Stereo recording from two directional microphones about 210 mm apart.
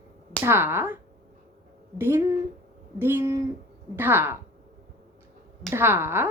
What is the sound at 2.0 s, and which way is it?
Speech, 10° right (ahead or behind).